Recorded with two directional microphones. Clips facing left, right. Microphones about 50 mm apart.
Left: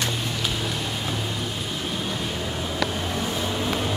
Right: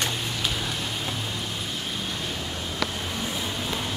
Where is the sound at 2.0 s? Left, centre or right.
Centre.